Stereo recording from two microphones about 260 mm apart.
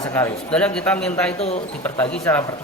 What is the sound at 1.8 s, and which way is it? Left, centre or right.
Speech, centre.